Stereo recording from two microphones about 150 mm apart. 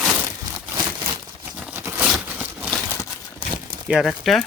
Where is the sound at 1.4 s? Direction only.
10° right (ahead or behind).